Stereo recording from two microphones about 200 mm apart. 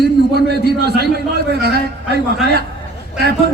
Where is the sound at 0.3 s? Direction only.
55° right (ahead or behind).